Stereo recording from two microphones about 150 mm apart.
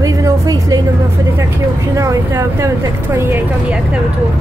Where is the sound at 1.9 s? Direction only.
20° right (ahead or behind).